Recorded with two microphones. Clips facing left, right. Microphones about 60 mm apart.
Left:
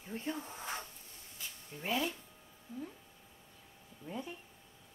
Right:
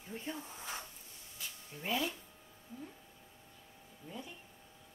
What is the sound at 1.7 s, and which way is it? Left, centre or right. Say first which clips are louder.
Speech: left 1 dB; centre.